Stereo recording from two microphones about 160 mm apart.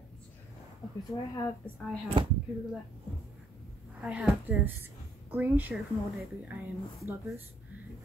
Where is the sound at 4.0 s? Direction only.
5° right (ahead or behind).